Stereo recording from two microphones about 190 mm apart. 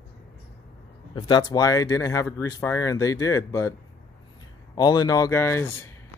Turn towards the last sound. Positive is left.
turn(degrees=15)  # may be behind; listen again after turning